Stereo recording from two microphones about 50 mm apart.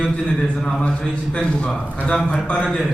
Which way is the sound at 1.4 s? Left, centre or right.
Left.